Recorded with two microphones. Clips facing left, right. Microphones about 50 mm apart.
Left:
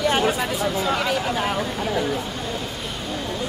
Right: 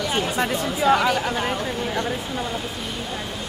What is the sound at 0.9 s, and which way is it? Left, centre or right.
Speech, centre.